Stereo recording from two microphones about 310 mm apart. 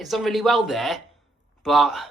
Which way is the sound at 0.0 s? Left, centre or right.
Centre.